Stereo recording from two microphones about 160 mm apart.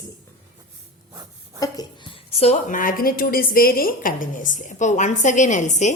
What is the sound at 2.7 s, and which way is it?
A woman's voice, 60° left (ahead or behind).